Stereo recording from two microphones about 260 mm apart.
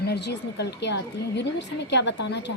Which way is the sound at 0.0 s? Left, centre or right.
Left.